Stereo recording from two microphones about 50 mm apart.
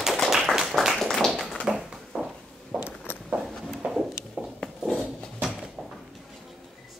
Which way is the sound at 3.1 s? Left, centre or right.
Left.